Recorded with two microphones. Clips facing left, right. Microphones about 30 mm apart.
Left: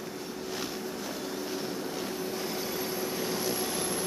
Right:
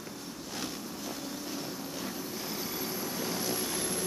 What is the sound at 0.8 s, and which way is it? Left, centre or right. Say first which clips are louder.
Vehicle: left 4 dB; centre.